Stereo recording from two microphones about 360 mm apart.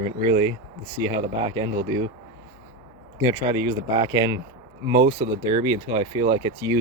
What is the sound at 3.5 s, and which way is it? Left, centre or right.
Speech, centre.